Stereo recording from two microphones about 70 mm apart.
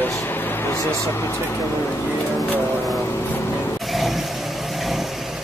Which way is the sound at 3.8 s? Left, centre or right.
Centre.